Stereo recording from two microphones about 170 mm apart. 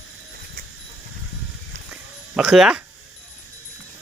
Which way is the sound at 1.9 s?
5° right (ahead or behind).